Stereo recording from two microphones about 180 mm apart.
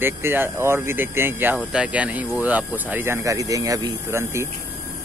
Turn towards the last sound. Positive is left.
turn(degrees=-15)  # may be behind; listen again after turning